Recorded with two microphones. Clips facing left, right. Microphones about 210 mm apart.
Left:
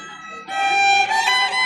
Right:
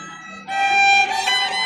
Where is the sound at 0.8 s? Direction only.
60° right (ahead or behind).